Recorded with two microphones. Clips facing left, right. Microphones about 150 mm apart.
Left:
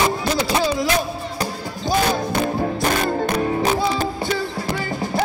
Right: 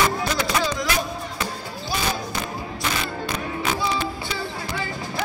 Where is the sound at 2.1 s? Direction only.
55° left (ahead or behind).